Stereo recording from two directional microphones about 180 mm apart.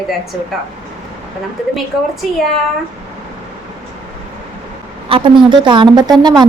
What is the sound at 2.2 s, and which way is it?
Speech, 5° right (ahead or behind).